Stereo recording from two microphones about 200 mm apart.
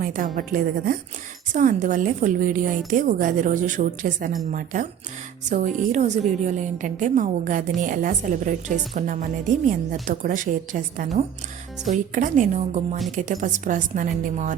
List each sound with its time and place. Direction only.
0.0 s a woman's voice: 45° right (ahead or behind)